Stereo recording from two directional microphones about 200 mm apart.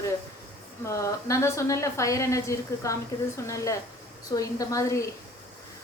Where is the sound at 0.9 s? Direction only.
15° left (ahead or behind).